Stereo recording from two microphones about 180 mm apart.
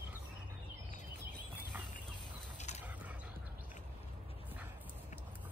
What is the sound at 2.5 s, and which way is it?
Mechanisms, 40° left (ahead or behind).